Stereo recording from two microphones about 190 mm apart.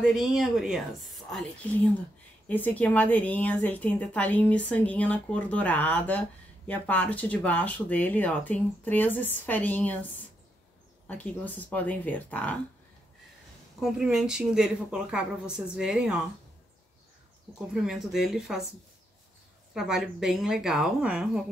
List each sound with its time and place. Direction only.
0.0 s a woman's voice: centre (ahead or behind)
11.1 s a woman's voice: 10° left (ahead or behind)
13.7 s speech: 5° right (ahead or behind)
17.7 s speech: centre (ahead or behind)
19.7 s speech: centre (ahead or behind)